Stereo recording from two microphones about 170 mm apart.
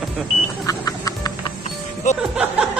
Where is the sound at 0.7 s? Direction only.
20° left (ahead or behind).